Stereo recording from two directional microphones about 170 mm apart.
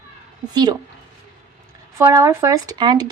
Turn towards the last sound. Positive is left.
turn(degrees=-25)  # may be behind; listen again after turning